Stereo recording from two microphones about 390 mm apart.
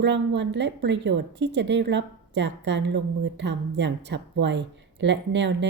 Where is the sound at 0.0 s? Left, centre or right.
Right.